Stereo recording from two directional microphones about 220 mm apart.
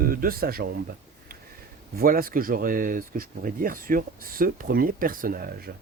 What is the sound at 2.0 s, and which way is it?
Speech, 40° right (ahead or behind).